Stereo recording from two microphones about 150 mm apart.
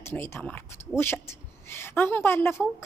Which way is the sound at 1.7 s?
15° left (ahead or behind).